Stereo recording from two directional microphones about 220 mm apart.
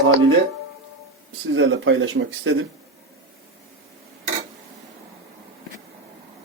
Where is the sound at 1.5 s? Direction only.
60° right (ahead or behind).